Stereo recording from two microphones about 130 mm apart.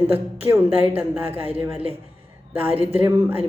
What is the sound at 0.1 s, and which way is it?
Speech, 15° right (ahead or behind).